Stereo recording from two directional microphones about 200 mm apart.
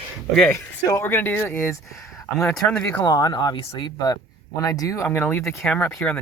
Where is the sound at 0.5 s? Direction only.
15° left (ahead or behind).